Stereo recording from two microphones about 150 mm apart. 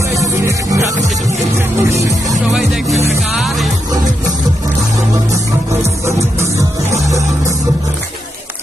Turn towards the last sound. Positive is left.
turn(degrees=-20)  # may be behind; listen again after turning